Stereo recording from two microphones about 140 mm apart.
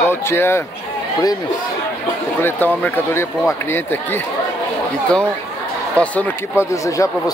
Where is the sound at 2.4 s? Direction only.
15° left (ahead or behind).